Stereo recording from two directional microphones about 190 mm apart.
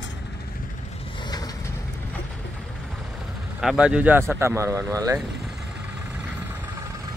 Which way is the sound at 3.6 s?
5° right (ahead or behind).